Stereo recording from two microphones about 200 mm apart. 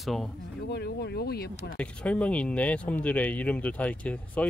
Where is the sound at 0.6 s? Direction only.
55° left (ahead or behind).